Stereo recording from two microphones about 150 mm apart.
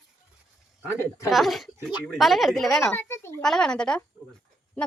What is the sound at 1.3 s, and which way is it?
Speech, centre (ahead or behind).